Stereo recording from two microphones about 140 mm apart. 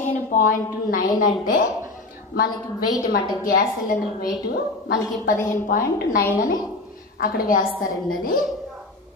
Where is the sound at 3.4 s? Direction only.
85° left.